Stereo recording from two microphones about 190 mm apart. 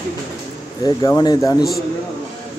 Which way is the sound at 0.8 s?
20° left (ahead or behind).